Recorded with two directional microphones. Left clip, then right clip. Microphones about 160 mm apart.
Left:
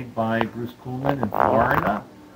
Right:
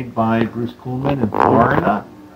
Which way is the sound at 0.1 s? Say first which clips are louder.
Right 6 dB; 15° left (ahead or behind).